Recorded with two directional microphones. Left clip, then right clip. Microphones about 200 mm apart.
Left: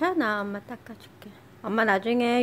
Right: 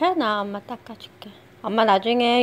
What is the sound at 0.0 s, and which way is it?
A woman's voice, 5° right (ahead or behind).